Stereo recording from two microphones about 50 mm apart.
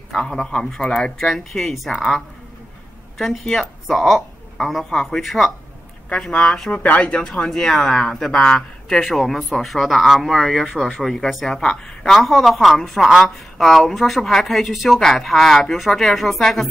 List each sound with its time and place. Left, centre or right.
0.1 s a man's voice: centre
1.1 s speech: centre
3.2 s a woman's voice: centre
6.7 s a woman's voice: left; by 16.6 s centre